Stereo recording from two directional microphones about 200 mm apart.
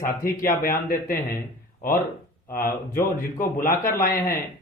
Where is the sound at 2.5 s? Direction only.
45° left (ahead or behind).